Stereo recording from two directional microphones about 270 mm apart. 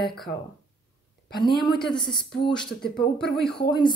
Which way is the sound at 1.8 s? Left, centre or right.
Centre.